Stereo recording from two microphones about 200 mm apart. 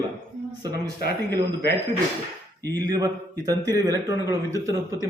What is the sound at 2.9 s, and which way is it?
A man's voice, 20° right (ahead or behind).